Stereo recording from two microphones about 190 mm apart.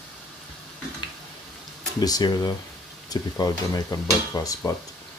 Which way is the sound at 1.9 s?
20° left (ahead or behind).